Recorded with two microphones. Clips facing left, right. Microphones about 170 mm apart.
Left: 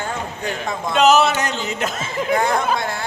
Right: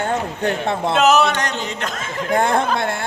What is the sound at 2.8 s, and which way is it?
Speech, 55° right (ahead or behind).